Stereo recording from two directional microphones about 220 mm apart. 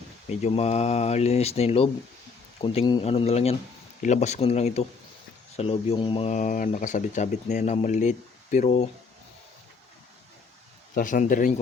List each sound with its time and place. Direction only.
0.3 s speech: 30° left (ahead or behind)
10.9 s speech: 35° left (ahead or behind)